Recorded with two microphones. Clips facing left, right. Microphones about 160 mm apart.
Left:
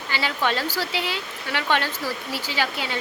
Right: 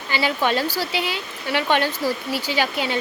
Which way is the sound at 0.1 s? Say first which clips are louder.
Right 4 dB; 15° right (ahead or behind).